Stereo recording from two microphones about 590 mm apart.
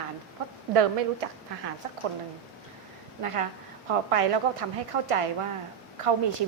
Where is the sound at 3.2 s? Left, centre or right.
Right.